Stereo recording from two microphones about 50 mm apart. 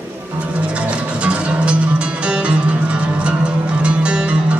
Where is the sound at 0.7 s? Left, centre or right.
Right.